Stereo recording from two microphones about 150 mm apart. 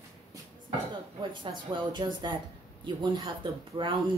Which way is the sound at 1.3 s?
30° right (ahead or behind).